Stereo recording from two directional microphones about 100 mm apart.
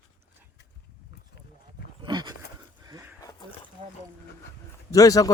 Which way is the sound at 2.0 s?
45° right (ahead or behind).